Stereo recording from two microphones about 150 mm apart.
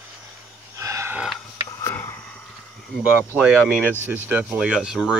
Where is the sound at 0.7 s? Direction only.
20° right (ahead or behind).